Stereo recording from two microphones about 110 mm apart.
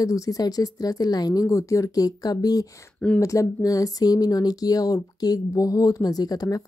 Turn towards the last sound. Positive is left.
turn(degrees=35)  # may be behind; listen again after turning